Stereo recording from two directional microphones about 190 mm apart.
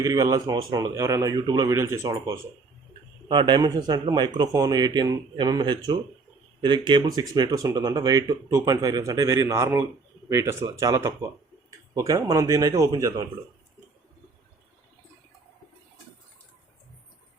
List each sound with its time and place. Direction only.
0.0 s speech: 20° right (ahead or behind)